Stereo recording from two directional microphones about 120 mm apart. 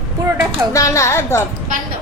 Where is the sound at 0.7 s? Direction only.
25° left (ahead or behind).